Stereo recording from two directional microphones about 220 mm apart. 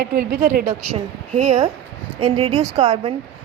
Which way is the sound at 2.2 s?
25° right (ahead or behind).